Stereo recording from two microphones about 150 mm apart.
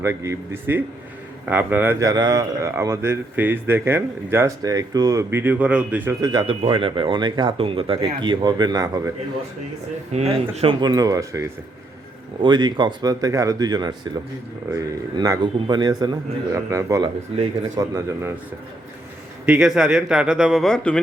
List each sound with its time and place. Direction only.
0.0 s speech: 20° right (ahead or behind)
2.0 s speech: 25° right (ahead or behind)
6.2 s speech: 30° right (ahead or behind)
10.1 s speech: 45° right (ahead or behind); by 18.3 s 20° right (ahead or behind)
19.5 s speech: 5° right (ahead or behind)